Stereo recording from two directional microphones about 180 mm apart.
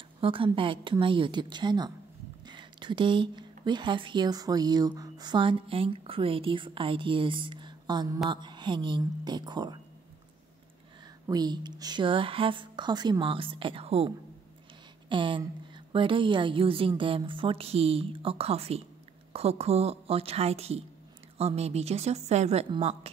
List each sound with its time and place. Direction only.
0.2 s speech: 30° right (ahead or behind)
11.2 s a woman's voice: 20° right (ahead or behind)